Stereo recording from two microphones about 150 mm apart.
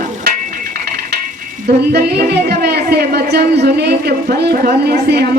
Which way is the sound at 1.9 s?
90° right.